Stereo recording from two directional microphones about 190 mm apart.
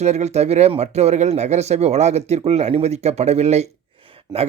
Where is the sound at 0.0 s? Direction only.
35° right (ahead or behind).